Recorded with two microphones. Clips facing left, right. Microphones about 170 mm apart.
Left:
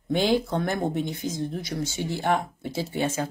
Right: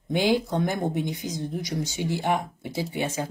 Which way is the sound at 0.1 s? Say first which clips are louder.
Even; 15° right (ahead or behind).